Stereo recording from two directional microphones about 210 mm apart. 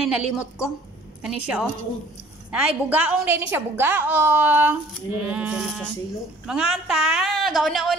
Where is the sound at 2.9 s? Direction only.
5° right (ahead or behind).